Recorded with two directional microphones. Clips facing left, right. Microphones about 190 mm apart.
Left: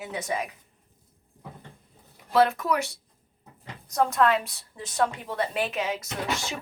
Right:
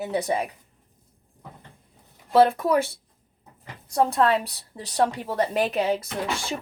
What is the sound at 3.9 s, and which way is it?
A woman's voice, 30° right (ahead or behind).